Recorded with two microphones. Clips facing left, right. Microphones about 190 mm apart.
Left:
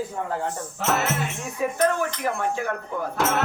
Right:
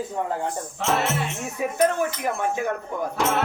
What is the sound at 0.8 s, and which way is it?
Speech, 5° left (ahead or behind).